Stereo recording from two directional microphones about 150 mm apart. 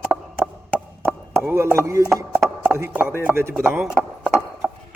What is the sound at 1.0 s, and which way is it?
Chopping, 15° right (ahead or behind).